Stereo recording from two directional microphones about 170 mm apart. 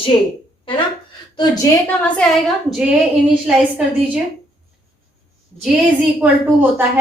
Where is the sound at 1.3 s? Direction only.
20° left (ahead or behind).